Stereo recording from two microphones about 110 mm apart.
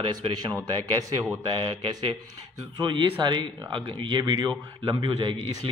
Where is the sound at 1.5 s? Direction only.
55° right (ahead or behind).